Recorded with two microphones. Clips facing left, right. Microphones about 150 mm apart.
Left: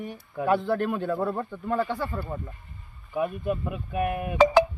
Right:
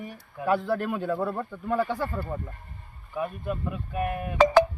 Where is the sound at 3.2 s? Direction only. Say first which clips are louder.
Left 3 dB; 15° left (ahead or behind).